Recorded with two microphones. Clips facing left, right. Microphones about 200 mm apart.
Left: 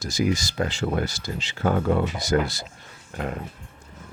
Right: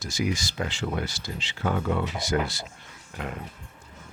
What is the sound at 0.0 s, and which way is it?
Speech, 40° left (ahead or behind).